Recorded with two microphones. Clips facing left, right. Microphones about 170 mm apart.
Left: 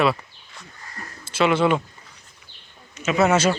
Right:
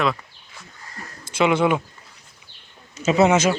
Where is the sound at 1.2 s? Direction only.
15° right (ahead or behind).